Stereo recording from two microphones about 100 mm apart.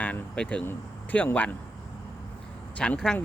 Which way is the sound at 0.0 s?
10° left (ahead or behind).